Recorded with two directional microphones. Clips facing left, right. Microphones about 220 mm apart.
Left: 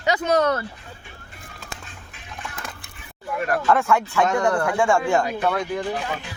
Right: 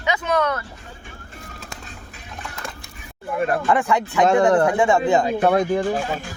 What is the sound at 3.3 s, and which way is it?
Speech, 25° right (ahead or behind).